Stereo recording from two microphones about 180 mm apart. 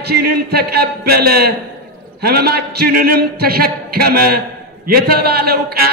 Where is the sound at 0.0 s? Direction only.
60° right (ahead or behind).